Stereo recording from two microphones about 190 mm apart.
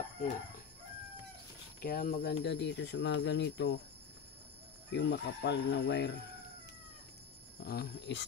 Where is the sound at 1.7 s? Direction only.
50° left (ahead or behind); by 3.8 s 70° left (ahead or behind).